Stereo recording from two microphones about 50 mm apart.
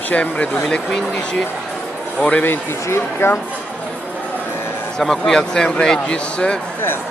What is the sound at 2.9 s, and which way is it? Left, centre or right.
Speech, left.